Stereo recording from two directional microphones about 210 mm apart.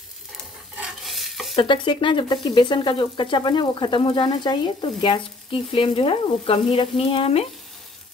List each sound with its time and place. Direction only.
0.7 s stir: centre (ahead or behind)
1.5 s speech: 25° left (ahead or behind)